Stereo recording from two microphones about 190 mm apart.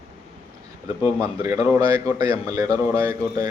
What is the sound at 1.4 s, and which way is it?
Speech, 20° right (ahead or behind).